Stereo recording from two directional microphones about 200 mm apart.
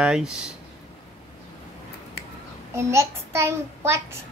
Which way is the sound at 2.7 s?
15° right (ahead or behind).